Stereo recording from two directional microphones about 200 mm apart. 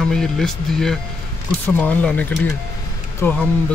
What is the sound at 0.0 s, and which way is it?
Speech, centre (ahead or behind).